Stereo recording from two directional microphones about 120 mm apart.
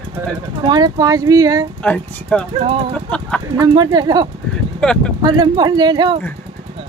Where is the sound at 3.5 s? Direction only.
35° right (ahead or behind).